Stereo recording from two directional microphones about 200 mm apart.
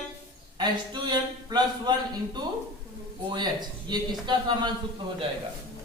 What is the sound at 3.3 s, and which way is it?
Speech, 20° right (ahead or behind).